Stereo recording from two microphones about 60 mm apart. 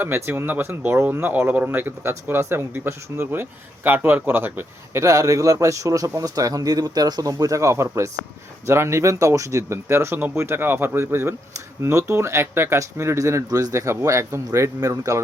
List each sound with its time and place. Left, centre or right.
0.0 s speech: right
4.9 s speech: right
11.8 s speech: right
13.5 s speech: right
13.8 s speech: right
14.8 s speech: right